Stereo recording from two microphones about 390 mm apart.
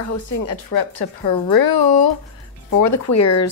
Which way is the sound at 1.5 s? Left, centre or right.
Left.